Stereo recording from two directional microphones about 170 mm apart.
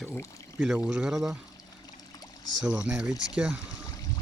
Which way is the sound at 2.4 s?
90° right.